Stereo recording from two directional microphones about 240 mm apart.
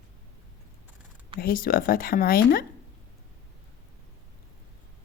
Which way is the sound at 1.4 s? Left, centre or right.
Left.